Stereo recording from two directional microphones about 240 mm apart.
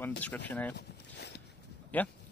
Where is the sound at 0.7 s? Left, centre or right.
Left.